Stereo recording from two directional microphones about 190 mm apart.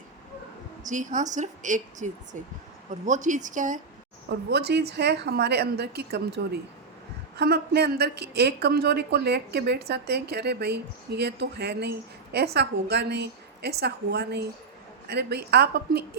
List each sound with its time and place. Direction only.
0.9 s a woman's voice: 40° right (ahead or behind)
4.3 s speech: 60° right (ahead or behind)